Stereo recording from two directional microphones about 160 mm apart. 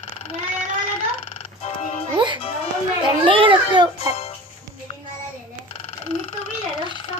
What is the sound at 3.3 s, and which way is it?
Speech, 30° right (ahead or behind).